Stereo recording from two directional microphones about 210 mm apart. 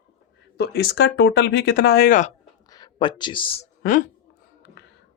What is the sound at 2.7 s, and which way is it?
Speech, 20° left (ahead or behind).